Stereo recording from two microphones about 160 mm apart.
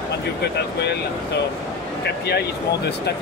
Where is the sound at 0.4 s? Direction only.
90° left.